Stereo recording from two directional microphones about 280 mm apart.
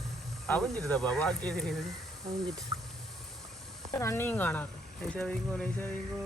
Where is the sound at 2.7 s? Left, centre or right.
Centre.